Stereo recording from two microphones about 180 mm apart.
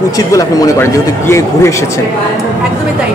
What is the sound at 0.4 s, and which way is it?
Speech, 15° left (ahead or behind).